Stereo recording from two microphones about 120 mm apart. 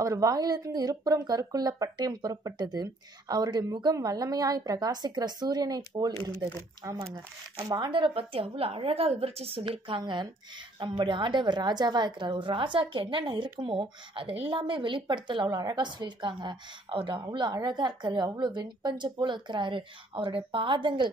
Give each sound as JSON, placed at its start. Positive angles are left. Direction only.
{"t": 0.0, "sound": "a woman's voice", "side_deg": -30}